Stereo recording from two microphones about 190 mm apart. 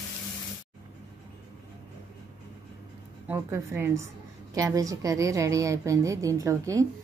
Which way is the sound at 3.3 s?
10° right (ahead or behind).